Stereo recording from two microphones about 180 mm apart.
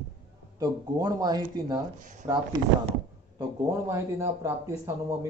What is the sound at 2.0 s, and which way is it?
Speech, 50° right (ahead or behind).